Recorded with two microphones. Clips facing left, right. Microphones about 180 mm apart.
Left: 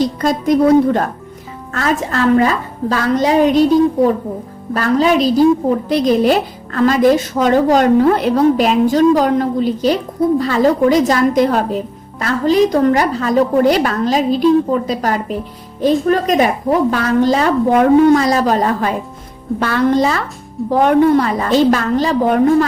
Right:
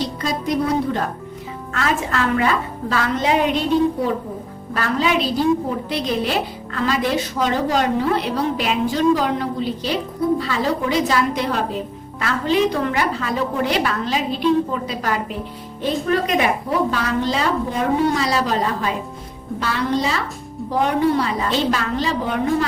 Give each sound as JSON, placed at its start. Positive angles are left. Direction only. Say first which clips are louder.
{"t": 0.2, "sound": "a woman's voice", "louder": "left 8 dB", "side_deg": 50}
{"t": 1.7, "sound": "a woman's voice", "louder": "left 4 dB", "side_deg": 40}
{"t": 17.7, "sound": "a woman's voice", "louder": "left 14 dB", "side_deg": 65}
{"t": 18.2, "sound": "a woman's voice", "louder": "left 6 dB", "side_deg": 45}